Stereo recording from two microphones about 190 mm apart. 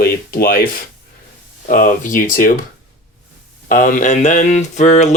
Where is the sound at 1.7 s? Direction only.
45° left (ahead or behind).